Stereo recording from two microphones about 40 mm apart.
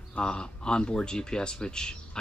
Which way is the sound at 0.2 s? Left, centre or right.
Left.